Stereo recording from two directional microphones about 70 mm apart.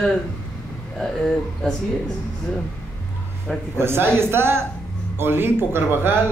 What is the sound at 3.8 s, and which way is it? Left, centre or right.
Music, right.